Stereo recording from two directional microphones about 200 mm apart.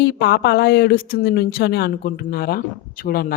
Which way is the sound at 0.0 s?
55° left (ahead or behind).